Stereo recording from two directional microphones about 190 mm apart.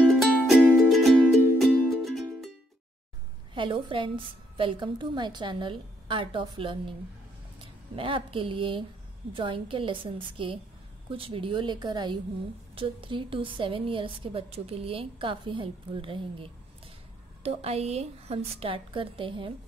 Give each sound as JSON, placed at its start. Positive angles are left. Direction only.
{"t": 0.0, "sound": "music", "side_deg": 0}
{"t": 3.5, "sound": "a woman's voice", "side_deg": -25}